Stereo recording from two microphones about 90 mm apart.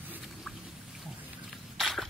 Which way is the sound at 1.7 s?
Centre (ahead or behind).